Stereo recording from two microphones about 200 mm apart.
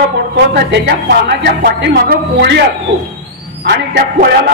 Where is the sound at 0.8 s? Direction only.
55° right (ahead or behind).